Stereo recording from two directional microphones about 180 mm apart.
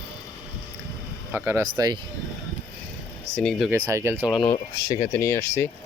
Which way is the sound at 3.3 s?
Centre (ahead or behind).